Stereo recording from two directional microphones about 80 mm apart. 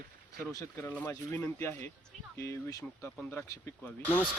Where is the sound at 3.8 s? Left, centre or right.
Left.